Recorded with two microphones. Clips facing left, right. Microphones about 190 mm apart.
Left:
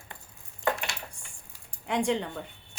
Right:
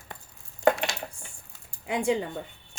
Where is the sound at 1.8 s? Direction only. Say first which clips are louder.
Right 1 dB; 5° right (ahead or behind).